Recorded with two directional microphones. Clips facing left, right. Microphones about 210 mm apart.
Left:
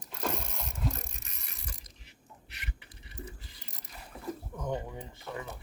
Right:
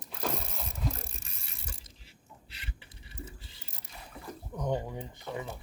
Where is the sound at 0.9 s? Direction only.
30° right (ahead or behind).